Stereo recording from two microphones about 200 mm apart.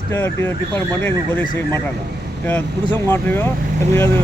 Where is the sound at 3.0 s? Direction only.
10° left (ahead or behind).